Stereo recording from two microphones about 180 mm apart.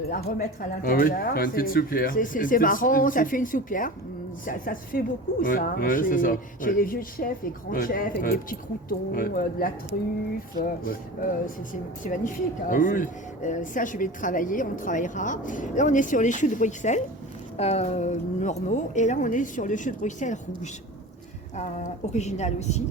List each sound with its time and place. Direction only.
0.1 s a woman's voice: 50° left (ahead or behind)